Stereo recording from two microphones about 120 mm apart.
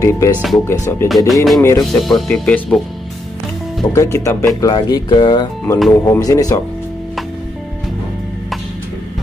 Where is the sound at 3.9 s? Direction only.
25° left (ahead or behind).